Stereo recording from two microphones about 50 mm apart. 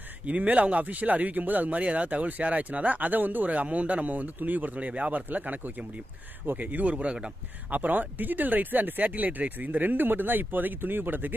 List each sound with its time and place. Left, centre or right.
0.2 s speech: right
7.7 s speech: right